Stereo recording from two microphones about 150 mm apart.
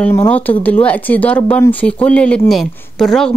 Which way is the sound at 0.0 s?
15° left (ahead or behind).